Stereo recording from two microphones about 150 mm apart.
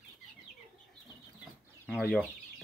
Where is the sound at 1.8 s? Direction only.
Centre (ahead or behind).